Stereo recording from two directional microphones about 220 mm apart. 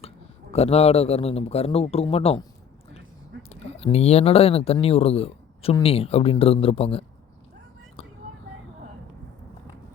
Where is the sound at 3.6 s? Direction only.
30° left (ahead or behind).